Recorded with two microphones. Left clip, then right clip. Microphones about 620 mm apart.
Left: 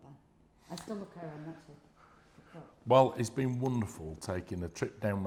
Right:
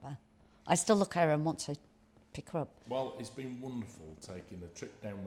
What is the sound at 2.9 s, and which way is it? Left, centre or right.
Speech, left.